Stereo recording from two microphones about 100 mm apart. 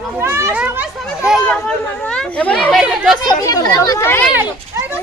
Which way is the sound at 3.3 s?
40° left (ahead or behind).